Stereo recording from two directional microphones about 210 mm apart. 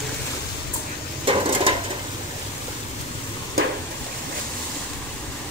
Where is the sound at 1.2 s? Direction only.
25° right (ahead or behind).